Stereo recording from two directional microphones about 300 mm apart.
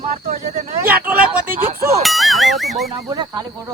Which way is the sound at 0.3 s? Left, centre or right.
Right.